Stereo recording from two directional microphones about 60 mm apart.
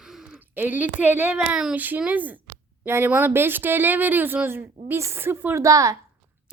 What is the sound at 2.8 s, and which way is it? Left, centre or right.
Speech, right.